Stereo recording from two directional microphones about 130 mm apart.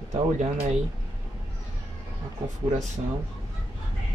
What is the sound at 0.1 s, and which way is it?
Speech, 50° right (ahead or behind).